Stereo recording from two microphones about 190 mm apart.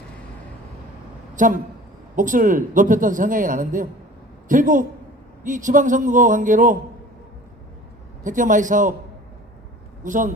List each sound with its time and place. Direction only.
1.4 s speech: 40° right (ahead or behind)
8.2 s speech: 40° right (ahead or behind)
10.0 s speech: 45° right (ahead or behind)